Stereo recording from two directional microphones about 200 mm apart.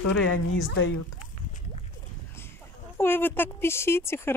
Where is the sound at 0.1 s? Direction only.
75° left (ahead or behind).